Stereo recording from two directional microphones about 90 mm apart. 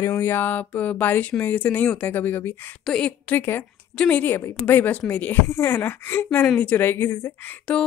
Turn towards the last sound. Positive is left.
turn(degrees=10)  # may be behind; listen again after turning